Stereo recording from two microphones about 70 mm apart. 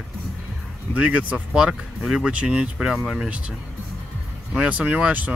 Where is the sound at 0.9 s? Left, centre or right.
Centre.